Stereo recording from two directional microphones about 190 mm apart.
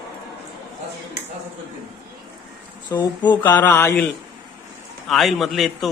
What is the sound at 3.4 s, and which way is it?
Speech, 10° left (ahead or behind).